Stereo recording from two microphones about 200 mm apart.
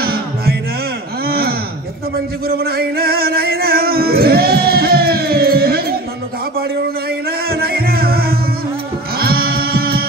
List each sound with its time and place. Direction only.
0.0 s music: 50° right (ahead or behind)
1.2 s a sound: 50° right (ahead or behind)
2.4 s music: 50° right (ahead or behind)
7.2 s music: 50° right (ahead or behind)